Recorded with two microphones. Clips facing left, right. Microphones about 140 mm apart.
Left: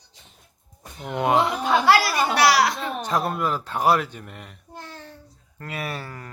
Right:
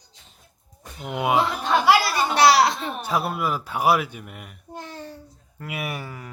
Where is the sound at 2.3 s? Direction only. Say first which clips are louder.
Right 3 dB; 25° right (ahead or behind).